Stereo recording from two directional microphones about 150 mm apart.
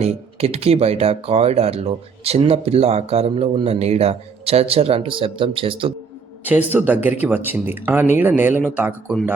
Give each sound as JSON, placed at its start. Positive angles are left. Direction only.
{"t": 0.0, "sound": "speech", "side_deg": -40}
{"t": 6.4, "sound": "speech", "side_deg": -10}